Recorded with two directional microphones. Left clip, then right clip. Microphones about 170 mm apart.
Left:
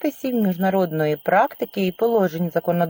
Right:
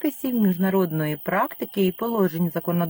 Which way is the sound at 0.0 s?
20° right (ahead or behind).